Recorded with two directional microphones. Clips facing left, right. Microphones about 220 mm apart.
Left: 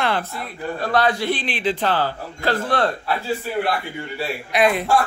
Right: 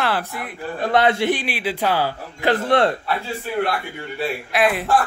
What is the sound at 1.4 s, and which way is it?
Speech, 10° right (ahead or behind).